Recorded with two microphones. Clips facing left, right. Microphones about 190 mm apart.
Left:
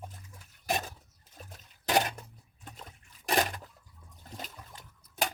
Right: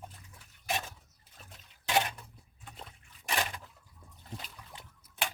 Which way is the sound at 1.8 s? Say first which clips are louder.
Left 2 dB; 40° left (ahead or behind).